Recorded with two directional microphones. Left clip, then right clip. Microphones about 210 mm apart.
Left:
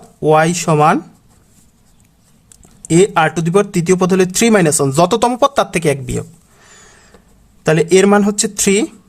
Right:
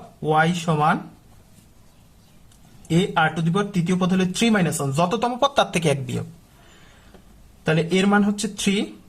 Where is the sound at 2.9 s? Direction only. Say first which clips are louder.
Left 9 dB; 35° left (ahead or behind).